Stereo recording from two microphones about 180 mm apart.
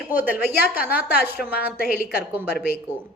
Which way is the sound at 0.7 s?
55° left (ahead or behind).